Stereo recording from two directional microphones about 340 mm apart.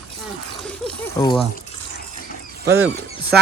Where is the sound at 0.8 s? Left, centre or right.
Centre.